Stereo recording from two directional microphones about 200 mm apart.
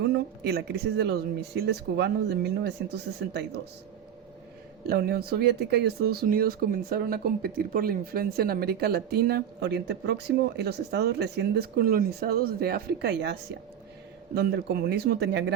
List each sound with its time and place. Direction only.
0.0 s speech: 55° right (ahead or behind)
4.9 s speech: 50° right (ahead or behind)
14.3 s speech: 55° right (ahead or behind)